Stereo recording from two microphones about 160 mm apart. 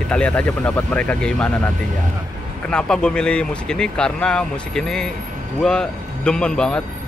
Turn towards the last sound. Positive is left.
turn(degrees=5)  # may be behind; listen again after turning